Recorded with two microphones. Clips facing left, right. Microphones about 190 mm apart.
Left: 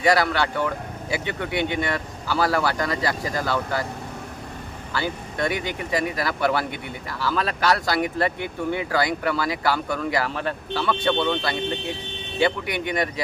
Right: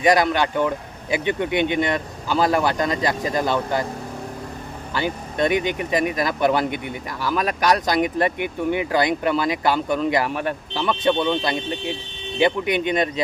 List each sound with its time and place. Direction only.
0.0 s speech: 20° right (ahead or behind)
4.9 s speech: 20° right (ahead or behind)